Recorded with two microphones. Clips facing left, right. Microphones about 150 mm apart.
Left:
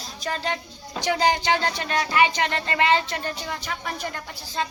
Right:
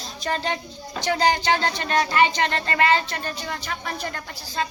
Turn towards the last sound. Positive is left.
turn(degrees=20)  # may be behind; listen again after turning